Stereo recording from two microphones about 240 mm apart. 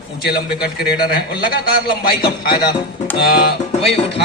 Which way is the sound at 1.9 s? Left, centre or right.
Left.